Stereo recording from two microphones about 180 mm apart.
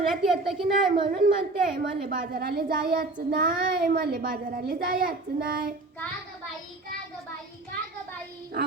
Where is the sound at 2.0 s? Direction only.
50° right (ahead or behind).